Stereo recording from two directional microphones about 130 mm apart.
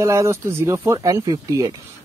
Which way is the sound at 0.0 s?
20° right (ahead or behind).